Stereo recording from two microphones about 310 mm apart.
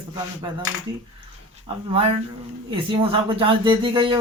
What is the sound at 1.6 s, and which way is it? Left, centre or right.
Speech, centre.